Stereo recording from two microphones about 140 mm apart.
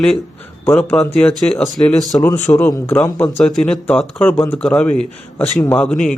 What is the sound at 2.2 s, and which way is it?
A man's voice, 20° left (ahead or behind).